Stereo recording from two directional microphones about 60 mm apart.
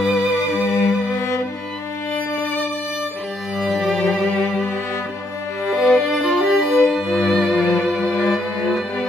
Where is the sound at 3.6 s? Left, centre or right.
Centre.